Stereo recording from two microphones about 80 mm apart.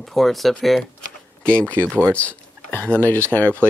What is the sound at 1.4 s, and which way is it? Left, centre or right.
Speech, centre.